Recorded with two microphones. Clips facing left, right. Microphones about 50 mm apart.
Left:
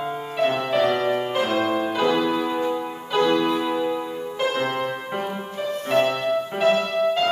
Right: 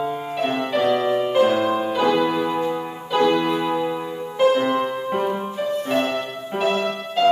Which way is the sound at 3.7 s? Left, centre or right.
Centre.